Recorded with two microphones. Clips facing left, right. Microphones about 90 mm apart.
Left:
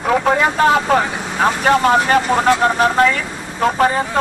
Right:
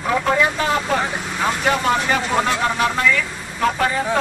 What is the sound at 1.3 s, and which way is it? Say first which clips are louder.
A man's voice: left 6 dB; 45° left (ahead or behind).